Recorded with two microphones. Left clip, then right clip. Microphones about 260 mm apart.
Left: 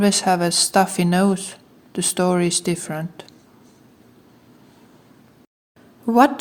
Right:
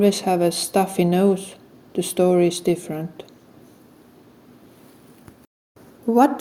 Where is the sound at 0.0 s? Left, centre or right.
Left.